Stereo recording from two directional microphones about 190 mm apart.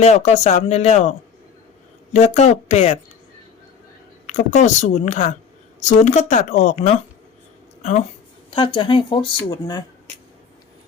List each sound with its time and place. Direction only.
0.0 s a woman's voice: 35° left (ahead or behind)
2.1 s a woman's voice: 35° left (ahead or behind)
4.3 s a woman's voice: 40° left (ahead or behind)
8.4 s speech: 25° left (ahead or behind)